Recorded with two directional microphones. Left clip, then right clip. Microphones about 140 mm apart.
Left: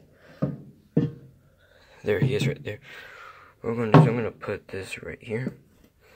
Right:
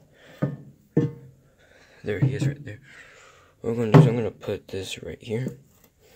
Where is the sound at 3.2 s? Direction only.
40° right (ahead or behind).